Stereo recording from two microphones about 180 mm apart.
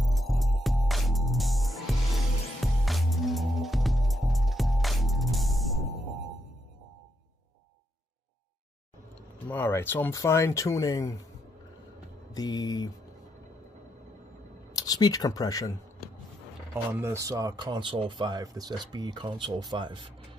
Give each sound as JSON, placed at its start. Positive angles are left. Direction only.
{"t": 0.0, "sound": "music", "side_deg": 0}
{"t": 9.5, "sound": "speech", "side_deg": 10}
{"t": 12.4, "sound": "speech", "side_deg": 20}
{"t": 14.8, "sound": "speech", "side_deg": 20}
{"t": 16.7, "sound": "speech", "side_deg": -15}